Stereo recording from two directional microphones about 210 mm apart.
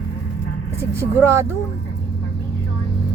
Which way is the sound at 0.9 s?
10° right (ahead or behind).